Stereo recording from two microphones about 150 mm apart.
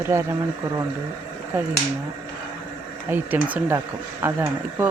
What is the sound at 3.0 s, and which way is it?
Speech, 10° right (ahead or behind).